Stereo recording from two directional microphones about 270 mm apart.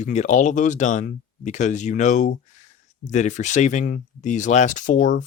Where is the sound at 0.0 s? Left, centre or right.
Left.